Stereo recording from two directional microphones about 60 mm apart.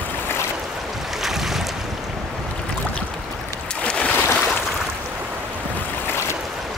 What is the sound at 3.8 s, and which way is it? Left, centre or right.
Boat, centre.